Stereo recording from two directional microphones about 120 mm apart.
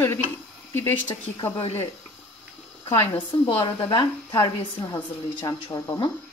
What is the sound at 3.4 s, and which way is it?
Speech, 45° left (ahead or behind).